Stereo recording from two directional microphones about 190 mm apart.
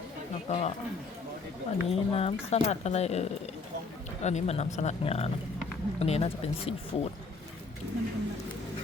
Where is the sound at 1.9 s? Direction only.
30° left (ahead or behind).